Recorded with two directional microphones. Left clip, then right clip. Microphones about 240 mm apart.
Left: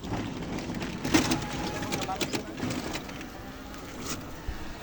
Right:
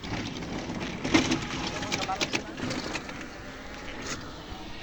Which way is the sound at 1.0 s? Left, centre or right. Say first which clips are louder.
Right 1 dB; left.